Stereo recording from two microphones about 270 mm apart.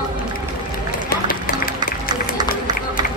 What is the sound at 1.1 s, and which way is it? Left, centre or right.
Run, left.